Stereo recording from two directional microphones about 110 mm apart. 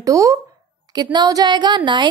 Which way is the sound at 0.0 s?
30° right (ahead or behind).